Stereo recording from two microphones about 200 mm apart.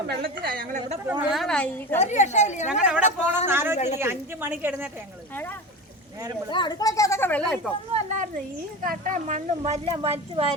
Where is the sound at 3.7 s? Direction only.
35° left (ahead or behind).